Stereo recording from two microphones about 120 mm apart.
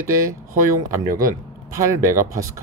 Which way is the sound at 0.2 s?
25° right (ahead or behind).